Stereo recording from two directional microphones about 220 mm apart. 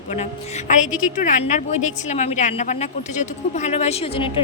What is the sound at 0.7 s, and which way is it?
A woman's voice, 35° left (ahead or behind).